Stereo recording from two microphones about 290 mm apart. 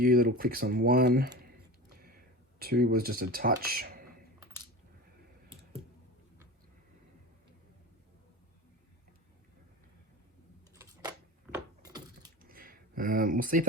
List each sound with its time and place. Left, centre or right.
0.0 s speech: right
2.6 s speech: right
11.5 s keys jangling: centre
12.4 s a sound: right